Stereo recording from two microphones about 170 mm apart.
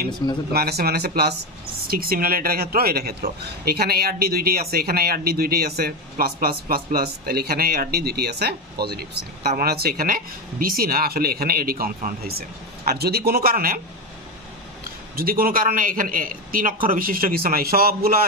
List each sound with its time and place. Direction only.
0.5 s speech: 65° right (ahead or behind)
15.1 s speech: 60° right (ahead or behind)